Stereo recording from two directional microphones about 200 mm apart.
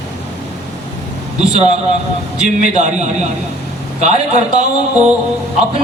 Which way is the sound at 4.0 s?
35° right (ahead or behind).